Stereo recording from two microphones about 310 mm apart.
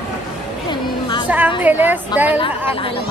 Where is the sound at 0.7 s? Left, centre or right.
Centre.